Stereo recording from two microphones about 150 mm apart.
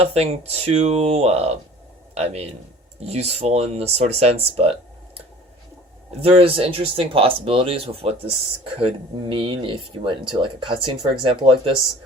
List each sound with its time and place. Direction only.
0.0 s speech: 45° right (ahead or behind)
6.2 s speech: 40° right (ahead or behind)
9.3 s speech: 35° right (ahead or behind)